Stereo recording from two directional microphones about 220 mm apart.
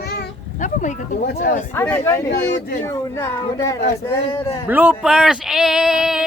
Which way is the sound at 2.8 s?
15° left (ahead or behind).